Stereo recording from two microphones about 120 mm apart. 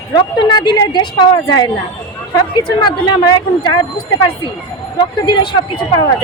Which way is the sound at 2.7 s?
40° left (ahead or behind).